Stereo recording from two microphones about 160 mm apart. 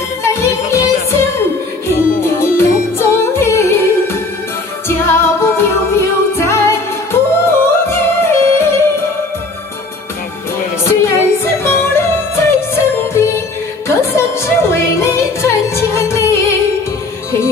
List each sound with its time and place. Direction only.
0.2 s music: 15° left (ahead or behind)
2.2 s music: 15° left (ahead or behind)
7.6 s yodeling: 15° left (ahead or behind)
10.8 s music: 15° left (ahead or behind)